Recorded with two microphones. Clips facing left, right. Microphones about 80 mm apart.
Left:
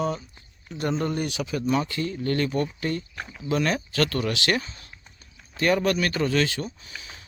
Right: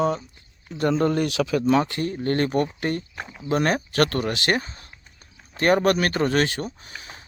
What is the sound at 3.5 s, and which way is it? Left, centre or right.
Speech, right.